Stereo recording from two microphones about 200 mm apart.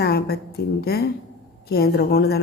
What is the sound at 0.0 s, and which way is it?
A woman's voice, 50° left (ahead or behind).